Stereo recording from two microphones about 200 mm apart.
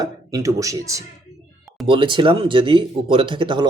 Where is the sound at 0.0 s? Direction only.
20° right (ahead or behind).